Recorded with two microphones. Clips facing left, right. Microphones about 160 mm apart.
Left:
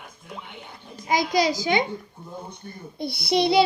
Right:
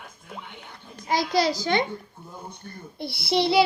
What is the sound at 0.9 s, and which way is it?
A child's voice, 15° left (ahead or behind).